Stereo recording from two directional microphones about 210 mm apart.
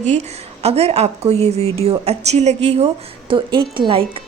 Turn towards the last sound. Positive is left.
turn(degrees=-25)  # may be behind; listen again after turning